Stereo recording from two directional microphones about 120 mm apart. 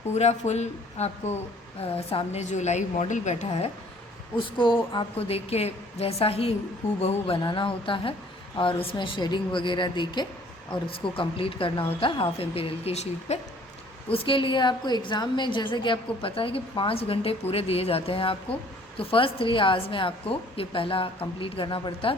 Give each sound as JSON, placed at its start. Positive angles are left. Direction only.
{"t": 0.1, "sound": "a woman's voice", "side_deg": 70}
{"t": 1.8, "sound": "a woman's voice", "side_deg": 55}
{"t": 4.4, "sound": "a woman's voice", "side_deg": 40}
{"t": 5.1, "sound": "a woman's voice", "side_deg": 55}
{"t": 7.4, "sound": "a woman's voice", "side_deg": 45}
{"t": 14.1, "sound": "a woman's voice", "side_deg": 45}